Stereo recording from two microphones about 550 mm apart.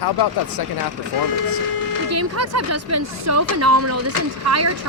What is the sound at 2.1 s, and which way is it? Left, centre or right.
Speech, right.